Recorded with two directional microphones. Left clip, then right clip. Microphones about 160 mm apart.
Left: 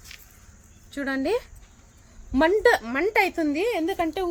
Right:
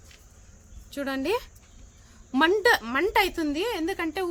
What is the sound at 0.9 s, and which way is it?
A woman's voice, 40° right (ahead or behind).